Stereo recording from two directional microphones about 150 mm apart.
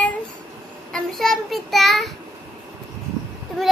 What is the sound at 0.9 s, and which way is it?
A child's voice, centre (ahead or behind).